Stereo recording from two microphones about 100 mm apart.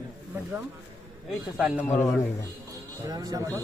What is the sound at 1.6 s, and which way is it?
Speech, 5° right (ahead or behind).